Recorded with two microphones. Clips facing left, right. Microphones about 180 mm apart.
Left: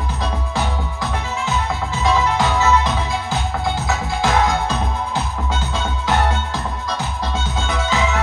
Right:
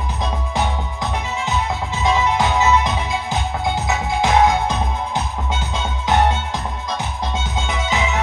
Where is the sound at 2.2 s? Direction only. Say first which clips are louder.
Even; 20° right (ahead or behind).